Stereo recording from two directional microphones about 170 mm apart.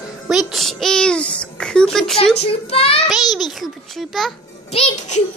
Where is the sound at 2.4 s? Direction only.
35° left (ahead or behind).